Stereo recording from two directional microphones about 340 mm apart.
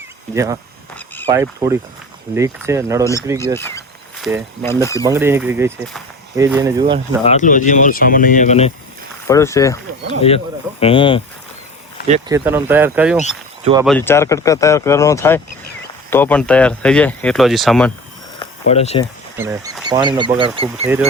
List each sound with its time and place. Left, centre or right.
0.3 s speech: centre
0.9 s a sound: centre
1.3 s speech: centre
3.0 s speech: centre
3.3 s a sound: centre
4.6 s speech: centre
5.0 s speech: centre
7.3 s speech: left
9.2 s speech: centre
12.3 s speech: centre
18.3 s a sound: centre
19.4 s speech: centre